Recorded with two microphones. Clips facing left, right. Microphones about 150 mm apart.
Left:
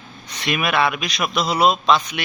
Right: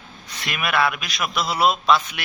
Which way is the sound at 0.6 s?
20° left (ahead or behind).